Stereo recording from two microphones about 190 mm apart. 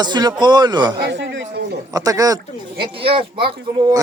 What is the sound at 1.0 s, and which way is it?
Speech, 70° right (ahead or behind).